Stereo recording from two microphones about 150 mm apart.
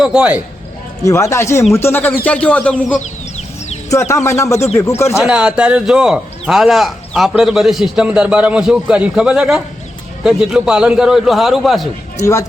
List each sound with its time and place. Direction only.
0.0 s speech: 5° right (ahead or behind)
1.0 s speech: 20° left (ahead or behind)
4.1 s speech: 20° left (ahead or behind)
5.1 s a man's voice: 5° right (ahead or behind)
12.2 s speech: 20° left (ahead or behind)